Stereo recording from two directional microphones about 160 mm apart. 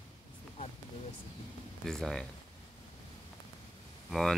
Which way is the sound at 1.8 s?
5° left (ahead or behind).